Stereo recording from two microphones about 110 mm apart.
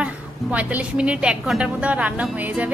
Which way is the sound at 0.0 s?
15° right (ahead or behind).